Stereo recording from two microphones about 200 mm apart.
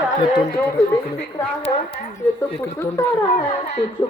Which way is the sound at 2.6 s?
10° left (ahead or behind).